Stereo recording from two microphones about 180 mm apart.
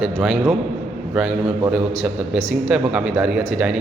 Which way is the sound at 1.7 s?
Centre (ahead or behind).